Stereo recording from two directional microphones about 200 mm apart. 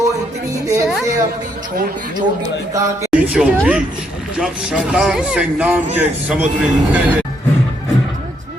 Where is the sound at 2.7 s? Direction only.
15° right (ahead or behind).